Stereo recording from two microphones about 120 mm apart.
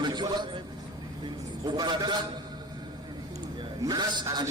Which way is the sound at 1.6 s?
35° right (ahead or behind).